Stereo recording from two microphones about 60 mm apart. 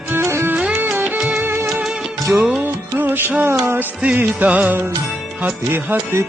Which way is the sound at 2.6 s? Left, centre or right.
Right.